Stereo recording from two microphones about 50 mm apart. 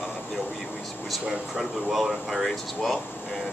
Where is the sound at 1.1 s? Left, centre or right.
Centre.